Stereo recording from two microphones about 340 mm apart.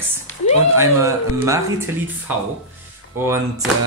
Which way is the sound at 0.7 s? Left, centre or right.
Centre.